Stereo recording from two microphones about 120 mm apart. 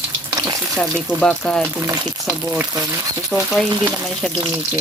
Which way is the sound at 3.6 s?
35° right (ahead or behind).